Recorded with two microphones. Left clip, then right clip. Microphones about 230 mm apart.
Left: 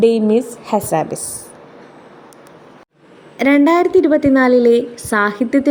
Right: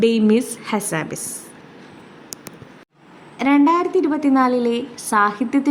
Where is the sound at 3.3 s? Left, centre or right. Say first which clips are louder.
Left 4 dB; centre.